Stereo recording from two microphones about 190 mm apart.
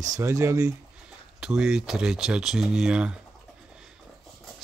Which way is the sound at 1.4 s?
5° right (ahead or behind).